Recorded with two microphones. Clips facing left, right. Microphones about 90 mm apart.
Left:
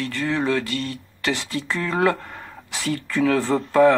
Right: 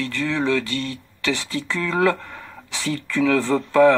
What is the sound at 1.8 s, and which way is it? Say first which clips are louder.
Speech: right 1 dB; 40° left (ahead or behind).